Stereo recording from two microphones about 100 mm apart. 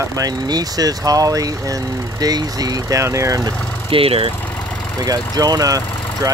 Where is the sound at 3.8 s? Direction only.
70° right (ahead or behind).